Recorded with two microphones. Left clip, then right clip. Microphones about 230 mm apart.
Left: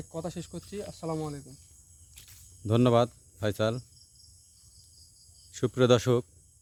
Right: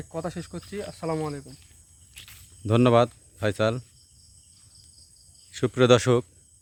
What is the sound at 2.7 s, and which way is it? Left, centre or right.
Speech, centre.